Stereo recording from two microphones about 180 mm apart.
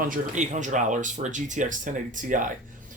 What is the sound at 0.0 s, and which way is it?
Speech, 45° right (ahead or behind).